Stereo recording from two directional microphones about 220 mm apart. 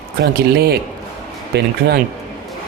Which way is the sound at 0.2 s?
45° right (ahead or behind).